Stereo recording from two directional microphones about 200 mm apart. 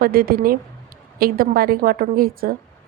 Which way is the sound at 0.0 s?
50° right (ahead or behind).